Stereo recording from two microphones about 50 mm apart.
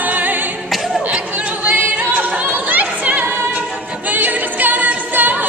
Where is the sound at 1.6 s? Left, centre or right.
Right.